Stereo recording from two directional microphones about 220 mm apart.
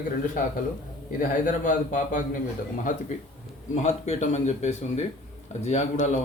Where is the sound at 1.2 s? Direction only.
35° left (ahead or behind).